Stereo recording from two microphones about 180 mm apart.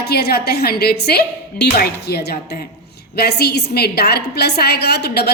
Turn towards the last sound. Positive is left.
turn(degrees=65)  # may be behind; listen again after turning